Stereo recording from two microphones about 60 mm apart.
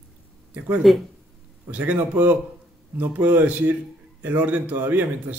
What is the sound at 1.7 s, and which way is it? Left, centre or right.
A man's voice, right.